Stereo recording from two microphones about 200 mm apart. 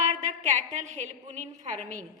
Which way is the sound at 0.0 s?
35° right (ahead or behind).